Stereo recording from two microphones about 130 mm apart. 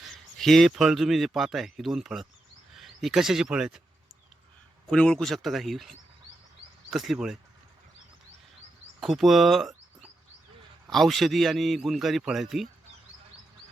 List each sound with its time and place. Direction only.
0.0 s speech: centre (ahead or behind)
4.9 s a man's voice: 5° left (ahead or behind)
6.9 s a man's voice: centre (ahead or behind)
9.0 s a man's voice: centre (ahead or behind)